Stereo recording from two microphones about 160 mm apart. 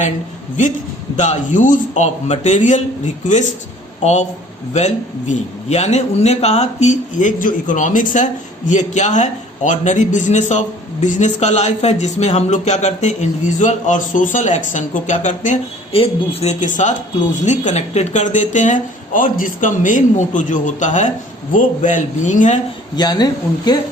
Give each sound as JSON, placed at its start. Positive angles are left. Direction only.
{"t": 1.1, "sound": "a man's voice", "side_deg": 45}
{"t": 4.0, "sound": "a man's voice", "side_deg": 45}
{"t": 23.0, "sound": "speech", "side_deg": 25}